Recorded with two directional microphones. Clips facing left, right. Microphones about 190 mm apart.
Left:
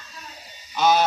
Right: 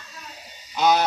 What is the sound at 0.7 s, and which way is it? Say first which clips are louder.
Honk: even; 15° right (ahead or behind).